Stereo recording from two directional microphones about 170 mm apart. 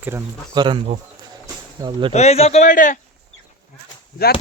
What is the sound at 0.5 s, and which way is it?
Speech, 25° right (ahead or behind).